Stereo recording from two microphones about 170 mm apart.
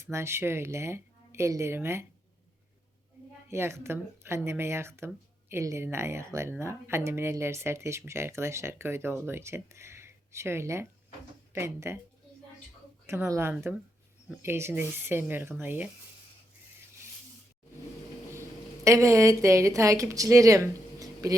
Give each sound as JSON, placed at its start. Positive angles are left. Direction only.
{"t": 0.0, "sound": "speech", "side_deg": -15}
{"t": 3.5, "sound": "speech", "side_deg": -15}
{"t": 13.1, "sound": "speech", "side_deg": -15}
{"t": 18.9, "sound": "speech", "side_deg": -20}
{"t": 21.0, "sound": "a sound", "side_deg": -20}